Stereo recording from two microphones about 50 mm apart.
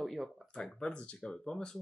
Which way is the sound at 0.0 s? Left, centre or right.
Centre.